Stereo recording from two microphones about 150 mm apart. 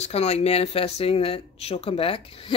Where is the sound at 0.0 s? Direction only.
45° left (ahead or behind).